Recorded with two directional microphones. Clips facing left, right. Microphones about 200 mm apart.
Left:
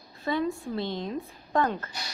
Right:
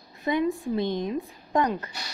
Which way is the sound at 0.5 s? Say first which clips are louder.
Right 5 dB; 15° right (ahead or behind).